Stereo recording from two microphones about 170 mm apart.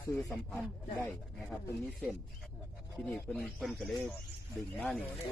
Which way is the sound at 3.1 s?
5° left (ahead or behind).